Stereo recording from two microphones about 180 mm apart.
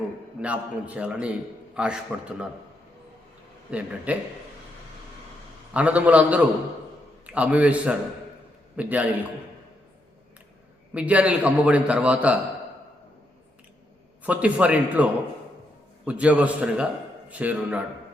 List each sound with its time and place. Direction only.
0.4 s a man's voice: 5° right (ahead or behind)
3.7 s a man's voice: 5° right (ahead or behind)
5.7 s a man's voice: 5° right (ahead or behind)
10.9 s a man's voice: 5° right (ahead or behind)
14.3 s a man's voice: 5° right (ahead or behind)